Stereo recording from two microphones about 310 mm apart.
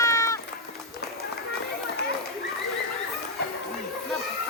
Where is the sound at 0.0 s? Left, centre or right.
Centre.